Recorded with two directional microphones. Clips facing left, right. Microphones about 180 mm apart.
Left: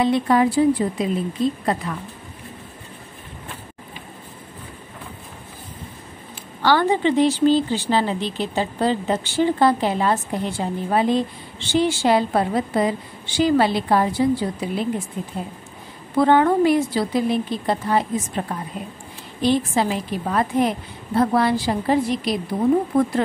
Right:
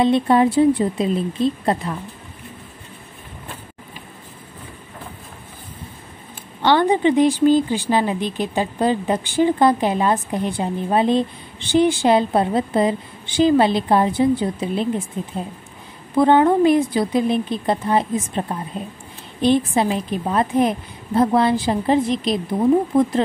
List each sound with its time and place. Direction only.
0.0 s a woman's voice: 25° right (ahead or behind)
6.6 s a woman's voice: 20° right (ahead or behind)
16.2 s a woman's voice: 20° right (ahead or behind)